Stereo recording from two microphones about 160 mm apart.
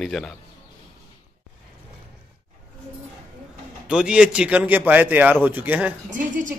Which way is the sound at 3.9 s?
5° right (ahead or behind).